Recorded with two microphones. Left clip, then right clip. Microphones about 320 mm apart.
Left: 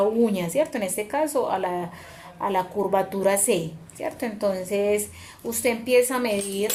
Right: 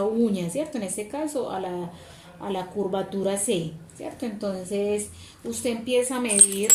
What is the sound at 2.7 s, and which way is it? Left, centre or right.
Speech, left.